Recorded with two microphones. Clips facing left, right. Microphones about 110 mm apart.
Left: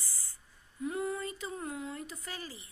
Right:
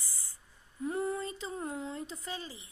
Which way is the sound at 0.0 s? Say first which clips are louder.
Left 1 dB; 20° right (ahead or behind).